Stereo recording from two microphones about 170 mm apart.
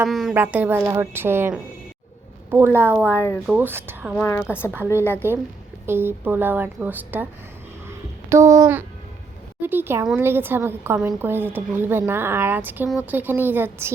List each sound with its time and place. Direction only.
0.0 s a woman's voice: centre (ahead or behind)
3.2 s a woman's voice: 15° left (ahead or behind)
3.4 s speech: 10° right (ahead or behind)
4.1 s a woman's voice: 10° left (ahead or behind)
4.7 s speech: 15° right (ahead or behind)
7.9 s a sound: 15° right (ahead or behind)
9.6 s speech: 10° right (ahead or behind)